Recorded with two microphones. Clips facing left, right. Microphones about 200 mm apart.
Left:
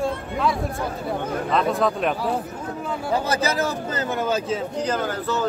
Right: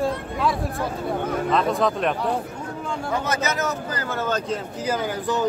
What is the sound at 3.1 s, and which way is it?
Speech, 30° left (ahead or behind).